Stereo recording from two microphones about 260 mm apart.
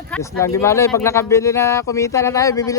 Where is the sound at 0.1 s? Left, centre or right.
Centre.